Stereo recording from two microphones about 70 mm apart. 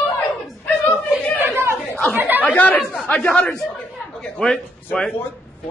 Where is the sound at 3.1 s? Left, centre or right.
Left.